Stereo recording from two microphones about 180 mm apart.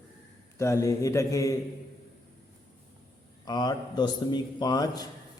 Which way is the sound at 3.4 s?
25° left (ahead or behind).